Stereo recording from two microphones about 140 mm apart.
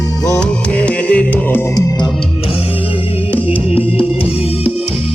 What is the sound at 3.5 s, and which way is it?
Music, 40° left (ahead or behind).